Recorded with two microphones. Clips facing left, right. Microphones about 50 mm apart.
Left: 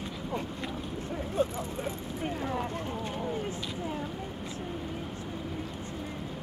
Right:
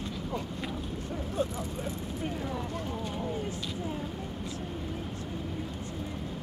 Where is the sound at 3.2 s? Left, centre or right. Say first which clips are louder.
Left 1 dB; centre.